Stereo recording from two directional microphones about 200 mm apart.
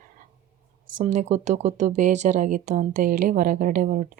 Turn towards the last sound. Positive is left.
turn(degrees=-40)  # may be behind; listen again after turning